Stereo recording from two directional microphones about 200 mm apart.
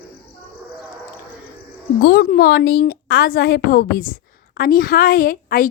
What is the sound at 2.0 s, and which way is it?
A woman's voice, 50° left (ahead or behind).